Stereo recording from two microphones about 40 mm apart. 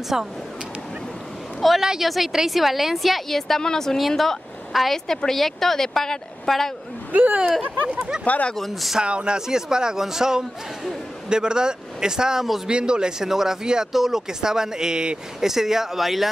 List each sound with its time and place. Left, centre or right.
0.1 s a man's voice: centre
1.8 s a man's voice: centre
2.0 s a woman's voice: centre
7.1 s speech: right
8.5 s a woman's voice: centre
9.0 s a man's voice: right; by 16.3 s centre